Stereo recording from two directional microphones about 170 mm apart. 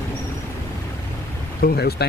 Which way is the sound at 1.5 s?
60° left (ahead or behind).